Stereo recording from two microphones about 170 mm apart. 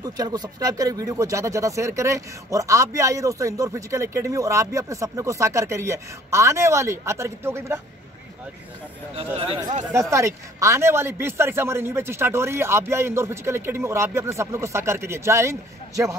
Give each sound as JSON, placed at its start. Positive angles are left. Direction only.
{"t": 0.0, "sound": "speech", "side_deg": -20}
{"t": 9.1, "sound": "speech", "side_deg": -35}
{"t": 10.1, "sound": "speech", "side_deg": -15}